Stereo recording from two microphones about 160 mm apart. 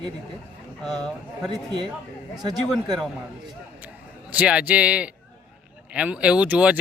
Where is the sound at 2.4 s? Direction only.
25° right (ahead or behind).